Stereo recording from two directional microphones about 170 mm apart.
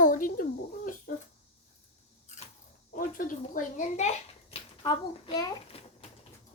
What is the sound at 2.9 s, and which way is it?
A child's voice, 50° left (ahead or behind).